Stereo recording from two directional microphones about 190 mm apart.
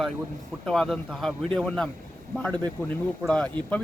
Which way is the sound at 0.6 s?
Centre (ahead or behind).